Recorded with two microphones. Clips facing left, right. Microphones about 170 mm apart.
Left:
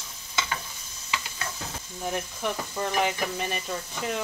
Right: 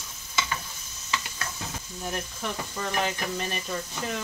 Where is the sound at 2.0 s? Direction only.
15° left (ahead or behind).